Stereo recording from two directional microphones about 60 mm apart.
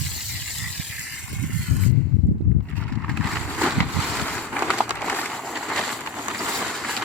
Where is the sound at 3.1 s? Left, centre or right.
Centre.